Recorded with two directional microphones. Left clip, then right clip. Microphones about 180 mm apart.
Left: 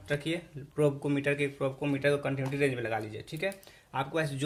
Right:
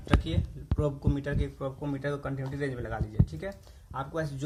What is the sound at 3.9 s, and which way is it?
Speech, 50° left (ahead or behind).